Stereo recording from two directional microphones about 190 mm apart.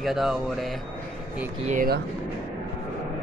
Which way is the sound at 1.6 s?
45° right (ahead or behind).